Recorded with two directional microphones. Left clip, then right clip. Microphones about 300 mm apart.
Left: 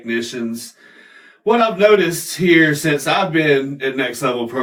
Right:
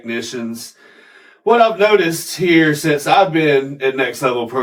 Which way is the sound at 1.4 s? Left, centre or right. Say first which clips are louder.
Right 2 dB; centre.